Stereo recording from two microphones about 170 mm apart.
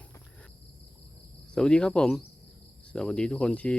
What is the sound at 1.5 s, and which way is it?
Speech, 5° left (ahead or behind).